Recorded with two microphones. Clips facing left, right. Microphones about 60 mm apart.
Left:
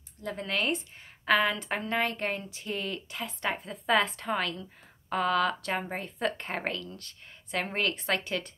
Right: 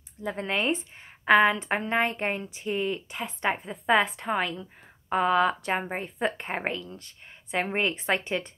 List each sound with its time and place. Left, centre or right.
0.5 s speech: right